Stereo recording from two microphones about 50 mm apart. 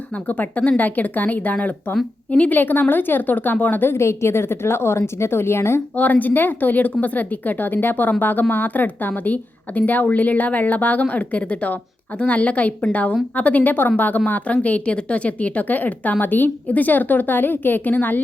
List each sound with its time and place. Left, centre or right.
0.3 s a woman's voice: left
3.9 s a woman's voice: left
6.0 s a woman's voice: left